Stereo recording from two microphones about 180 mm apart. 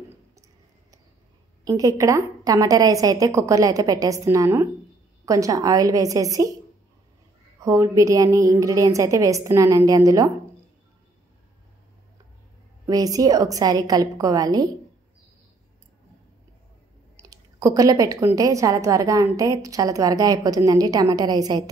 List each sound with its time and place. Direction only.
1.6 s a woman's voice: 20° right (ahead or behind)
7.6 s a woman's voice: 20° right (ahead or behind)
12.8 s a woman's voice: 20° right (ahead or behind)
17.3 s a woman's voice: 20° right (ahead or behind)